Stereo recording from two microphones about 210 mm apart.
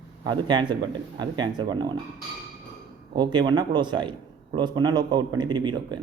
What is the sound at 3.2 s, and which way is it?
A man's voice, 20° right (ahead or behind).